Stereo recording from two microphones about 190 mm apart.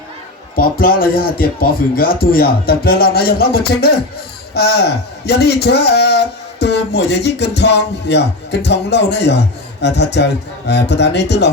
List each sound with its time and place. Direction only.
0.5 s a man's voice: 50° left (ahead or behind)